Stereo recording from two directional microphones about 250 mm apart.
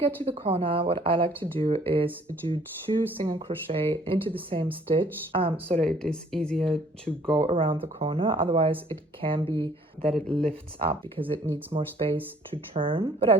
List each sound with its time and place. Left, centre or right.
0.0 s speech: right
5.8 s speech: centre
7.3 s speech: centre
10.8 s speech: right